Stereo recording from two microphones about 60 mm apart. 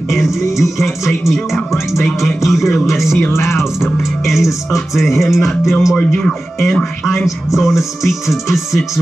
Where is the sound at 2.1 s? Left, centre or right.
Centre.